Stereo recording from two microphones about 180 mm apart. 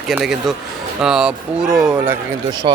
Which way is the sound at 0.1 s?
Centre (ahead or behind).